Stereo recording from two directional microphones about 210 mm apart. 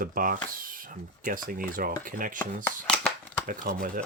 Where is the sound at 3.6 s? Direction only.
45° right (ahead or behind).